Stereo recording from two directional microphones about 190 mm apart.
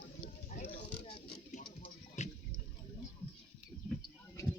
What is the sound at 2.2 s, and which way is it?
Water, 35° left (ahead or behind).